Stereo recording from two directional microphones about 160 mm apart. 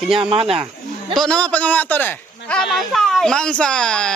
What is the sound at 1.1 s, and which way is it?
A man's voice, 5° left (ahead or behind).